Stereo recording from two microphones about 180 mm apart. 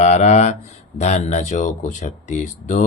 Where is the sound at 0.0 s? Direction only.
40° left (ahead or behind).